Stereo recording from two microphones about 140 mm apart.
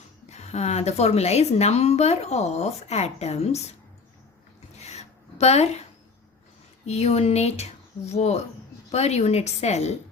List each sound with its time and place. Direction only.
0.3 s a woman's voice: 50° left (ahead or behind)
4.8 s a sound: 50° left (ahead or behind)
6.8 s a woman's voice: 50° left (ahead or behind)